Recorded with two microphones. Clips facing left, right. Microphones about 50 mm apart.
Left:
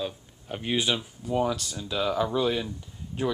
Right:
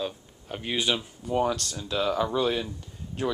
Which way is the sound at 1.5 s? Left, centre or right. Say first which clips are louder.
Right 1 dB; centre.